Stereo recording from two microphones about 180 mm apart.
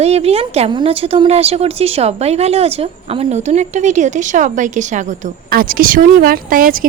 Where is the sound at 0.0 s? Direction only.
35° right (ahead or behind).